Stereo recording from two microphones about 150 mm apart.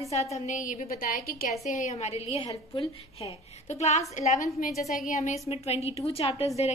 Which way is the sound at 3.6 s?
50° left (ahead or behind).